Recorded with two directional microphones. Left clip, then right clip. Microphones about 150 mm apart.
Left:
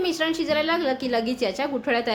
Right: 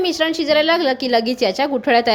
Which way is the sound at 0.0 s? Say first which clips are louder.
Right 6 dB; 35° right (ahead or behind).